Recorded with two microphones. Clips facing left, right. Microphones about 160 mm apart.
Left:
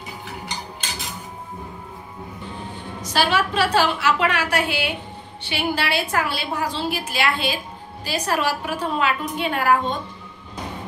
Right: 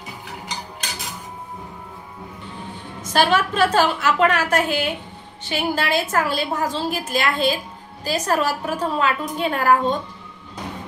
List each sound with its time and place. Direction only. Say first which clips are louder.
3.0 s a woman's voice: right 3 dB; 50° right (ahead or behind)